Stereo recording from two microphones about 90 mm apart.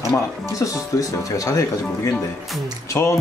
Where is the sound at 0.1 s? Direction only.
35° left (ahead or behind).